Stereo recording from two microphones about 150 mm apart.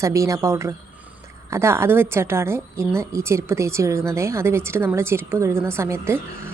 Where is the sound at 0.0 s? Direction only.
20° right (ahead or behind).